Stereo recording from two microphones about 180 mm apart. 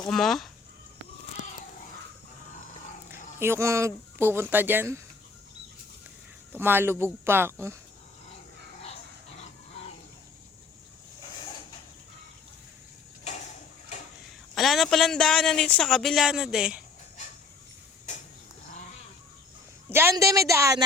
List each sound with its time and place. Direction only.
0.1 s speech: centre (ahead or behind)
3.4 s speech: 15° right (ahead or behind)
6.5 s speech: 10° right (ahead or behind)
14.5 s speech: centre (ahead or behind)
19.9 s speech: 15° right (ahead or behind)